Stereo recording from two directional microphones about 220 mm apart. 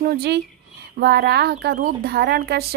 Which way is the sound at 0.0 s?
45° right (ahead or behind).